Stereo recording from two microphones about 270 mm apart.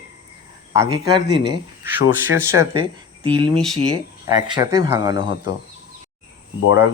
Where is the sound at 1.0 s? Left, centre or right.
Centre.